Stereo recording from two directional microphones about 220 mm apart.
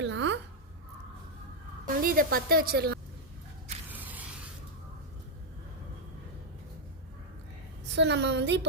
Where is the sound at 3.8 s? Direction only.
10° right (ahead or behind).